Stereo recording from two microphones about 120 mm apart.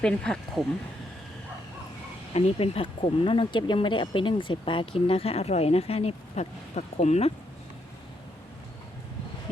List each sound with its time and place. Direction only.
0.0 s speech: 5° left (ahead or behind)
2.3 s speech: 55° left (ahead or behind)